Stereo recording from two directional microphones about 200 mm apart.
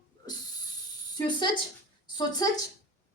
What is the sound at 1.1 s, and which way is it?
Speech, 25° left (ahead or behind).